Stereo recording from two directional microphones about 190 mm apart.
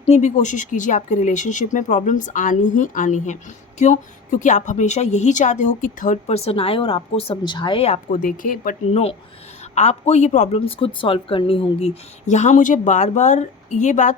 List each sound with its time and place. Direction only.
0.0 s a woman's voice: 35° left (ahead or behind)
8.9 s a woman's voice: 35° left (ahead or behind)